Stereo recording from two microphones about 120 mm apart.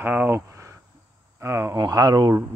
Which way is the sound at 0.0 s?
15° right (ahead or behind).